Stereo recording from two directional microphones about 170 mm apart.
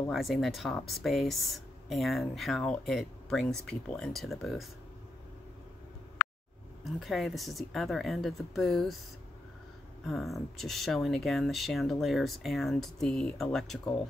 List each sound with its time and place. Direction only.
0.1 s speech: centre (ahead or behind)
6.8 s speech: centre (ahead or behind)
10.0 s speech: centre (ahead or behind)